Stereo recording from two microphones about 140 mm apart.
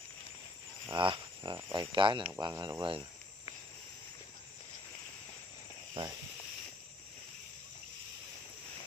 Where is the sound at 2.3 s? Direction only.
20° right (ahead or behind).